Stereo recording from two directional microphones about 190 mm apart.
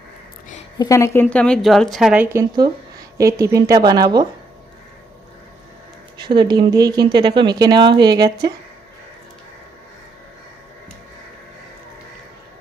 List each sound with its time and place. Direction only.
0.8 s a woman's voice: 15° left (ahead or behind); by 4.3 s 20° right (ahead or behind)
6.2 s speech: 25° right (ahead or behind)